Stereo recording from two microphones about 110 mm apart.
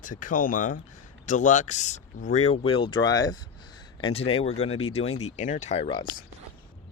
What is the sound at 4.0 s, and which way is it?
Speech, 55° left (ahead or behind).